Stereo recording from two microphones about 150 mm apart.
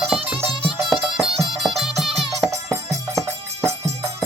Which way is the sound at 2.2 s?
20° right (ahead or behind).